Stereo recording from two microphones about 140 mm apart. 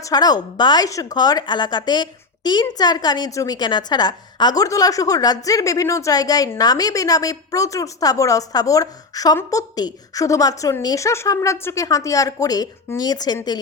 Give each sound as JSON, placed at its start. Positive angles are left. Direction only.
{"t": 0.0, "sound": "speech", "side_deg": 30}